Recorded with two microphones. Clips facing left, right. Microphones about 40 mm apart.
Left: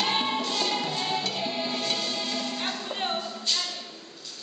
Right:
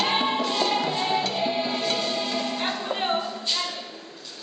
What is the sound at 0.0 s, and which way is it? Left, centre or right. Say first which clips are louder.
Music: right 3 dB; centre.